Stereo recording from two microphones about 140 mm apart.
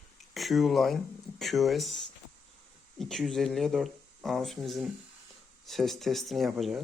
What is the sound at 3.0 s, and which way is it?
Speech, 5° left (ahead or behind).